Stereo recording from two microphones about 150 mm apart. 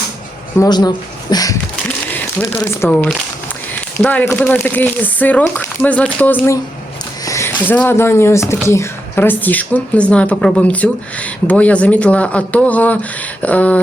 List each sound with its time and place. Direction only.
0.5 s speech: 25° left (ahead or behind)
2.1 s a woman's voice: 15° left (ahead or behind)